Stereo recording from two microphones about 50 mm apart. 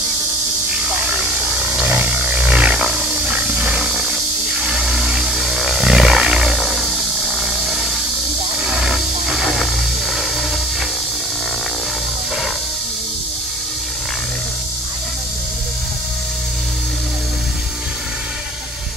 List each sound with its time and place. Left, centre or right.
1.1 s a sound: centre
1.9 s roar: right
3.3 s wild animals: right; by 8.9 s centre
8.9 s music: centre